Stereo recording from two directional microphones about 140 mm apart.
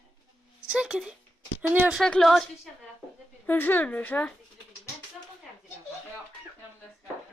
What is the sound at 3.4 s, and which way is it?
Speech, 15° left (ahead or behind).